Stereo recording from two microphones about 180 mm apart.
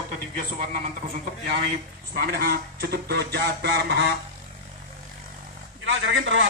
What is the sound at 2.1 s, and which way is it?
Speech, 55° right (ahead or behind).